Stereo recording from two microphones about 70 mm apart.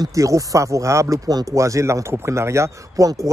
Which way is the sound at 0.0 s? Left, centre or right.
Right.